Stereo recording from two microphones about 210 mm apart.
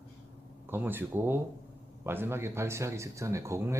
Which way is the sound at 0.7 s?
10° right (ahead or behind).